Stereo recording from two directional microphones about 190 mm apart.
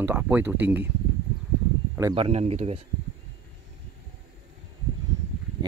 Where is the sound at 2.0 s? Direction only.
20° right (ahead or behind).